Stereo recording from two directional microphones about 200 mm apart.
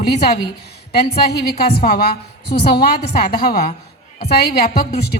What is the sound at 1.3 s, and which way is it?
A woman's voice, 50° left (ahead or behind).